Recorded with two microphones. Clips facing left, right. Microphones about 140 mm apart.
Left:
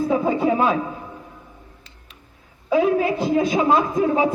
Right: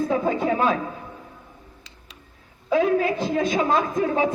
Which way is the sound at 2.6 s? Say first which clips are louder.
Left 2 dB; 20° left (ahead or behind).